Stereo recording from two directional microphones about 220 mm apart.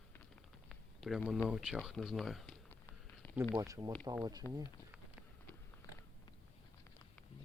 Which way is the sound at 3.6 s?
15° right (ahead or behind).